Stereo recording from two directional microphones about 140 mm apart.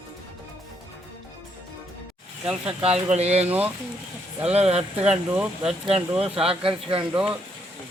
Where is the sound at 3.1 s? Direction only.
50° right (ahead or behind).